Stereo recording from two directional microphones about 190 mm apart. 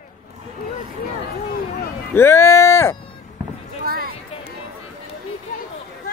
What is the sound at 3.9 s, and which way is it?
Music, 55° right (ahead or behind).